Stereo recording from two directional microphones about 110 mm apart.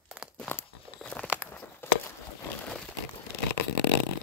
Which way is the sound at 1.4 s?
20° left (ahead or behind).